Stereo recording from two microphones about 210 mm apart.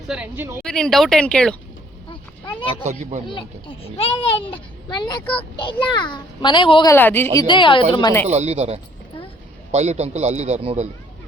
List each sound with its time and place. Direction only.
0.1 s a woman's voice: 10° right (ahead or behind)
0.6 s speech: 5° left (ahead or behind)
2.8 s a man's voice: 35° right (ahead or behind)
4.0 s a child's voice: 30° left (ahead or behind)
5.2 s speech: 5° left (ahead or behind)
5.5 s a child's voice: 25° left (ahead or behind)
6.9 s speech: 10° left (ahead or behind)
7.3 s a child's voice: 20° left (ahead or behind)
8.3 s a man's voice: 30° right (ahead or behind)